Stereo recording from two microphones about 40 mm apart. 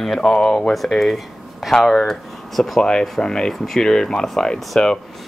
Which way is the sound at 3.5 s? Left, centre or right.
Centre.